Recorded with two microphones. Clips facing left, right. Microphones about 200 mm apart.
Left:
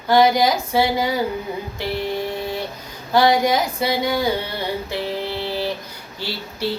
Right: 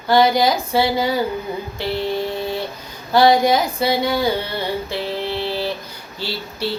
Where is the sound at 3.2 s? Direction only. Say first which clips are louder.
Right 4 dB; 25° right (ahead or behind).